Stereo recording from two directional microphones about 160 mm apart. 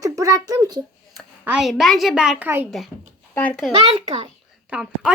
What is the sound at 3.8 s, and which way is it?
Speech, 40° right (ahead or behind).